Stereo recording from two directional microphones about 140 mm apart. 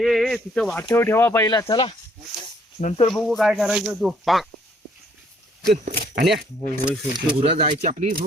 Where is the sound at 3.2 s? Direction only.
Centre (ahead or behind).